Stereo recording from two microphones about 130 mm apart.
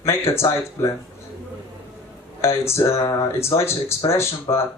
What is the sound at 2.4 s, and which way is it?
Speech, 20° left (ahead or behind).